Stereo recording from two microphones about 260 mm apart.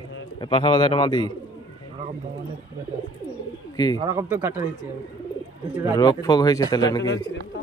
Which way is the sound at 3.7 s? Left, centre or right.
Centre.